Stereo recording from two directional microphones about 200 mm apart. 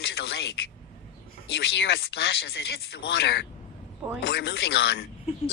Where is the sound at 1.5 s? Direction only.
55° left (ahead or behind).